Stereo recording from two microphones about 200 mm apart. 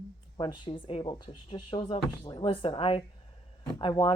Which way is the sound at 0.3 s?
25° left (ahead or behind).